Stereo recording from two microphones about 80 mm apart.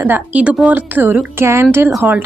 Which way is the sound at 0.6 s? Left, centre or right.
Right.